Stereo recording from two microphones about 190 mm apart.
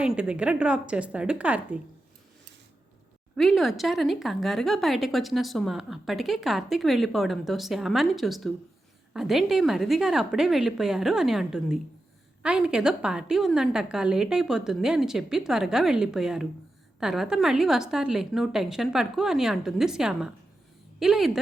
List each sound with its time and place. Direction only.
0.0 s speech: 5° right (ahead or behind)
3.3 s speech: centre (ahead or behind)